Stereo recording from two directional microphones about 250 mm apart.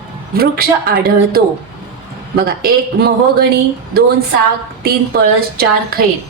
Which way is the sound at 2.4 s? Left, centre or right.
Right.